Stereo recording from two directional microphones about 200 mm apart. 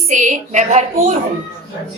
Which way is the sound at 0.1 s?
40° right (ahead or behind).